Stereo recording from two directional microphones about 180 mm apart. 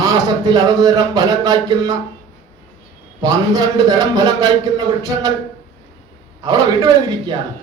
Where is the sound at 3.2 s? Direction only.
20° right (ahead or behind).